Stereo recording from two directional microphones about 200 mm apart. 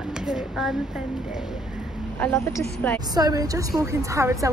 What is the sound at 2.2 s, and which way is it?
Speech, 10° left (ahead or behind).